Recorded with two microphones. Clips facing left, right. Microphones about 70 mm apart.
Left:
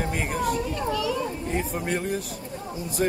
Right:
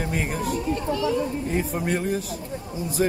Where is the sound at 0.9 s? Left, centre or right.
Right.